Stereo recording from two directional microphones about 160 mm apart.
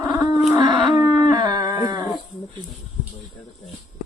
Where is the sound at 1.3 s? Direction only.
25° right (ahead or behind).